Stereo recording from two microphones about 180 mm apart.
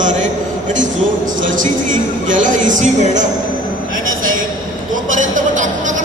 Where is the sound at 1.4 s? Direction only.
45° right (ahead or behind).